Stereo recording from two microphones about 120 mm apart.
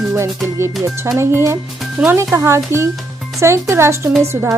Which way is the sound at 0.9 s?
20° right (ahead or behind).